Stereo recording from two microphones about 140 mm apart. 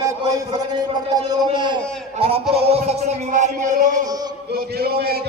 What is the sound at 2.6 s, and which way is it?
Music, 50° right (ahead or behind).